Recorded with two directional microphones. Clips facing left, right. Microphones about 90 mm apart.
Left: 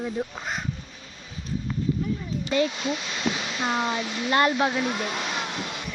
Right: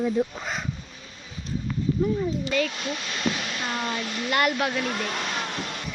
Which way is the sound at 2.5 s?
15° left (ahead or behind).